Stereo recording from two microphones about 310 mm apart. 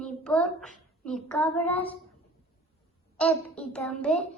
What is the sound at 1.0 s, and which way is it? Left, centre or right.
Speech, centre.